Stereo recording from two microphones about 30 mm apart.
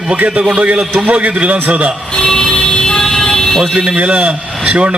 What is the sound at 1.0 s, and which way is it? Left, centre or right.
Speech, right.